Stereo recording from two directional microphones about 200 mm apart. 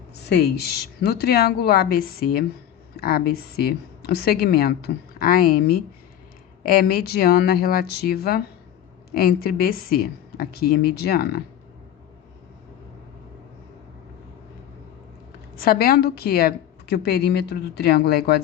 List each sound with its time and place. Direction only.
0.3 s a woman's voice: 55° left (ahead or behind)
15.6 s a woman's voice: 50° left (ahead or behind)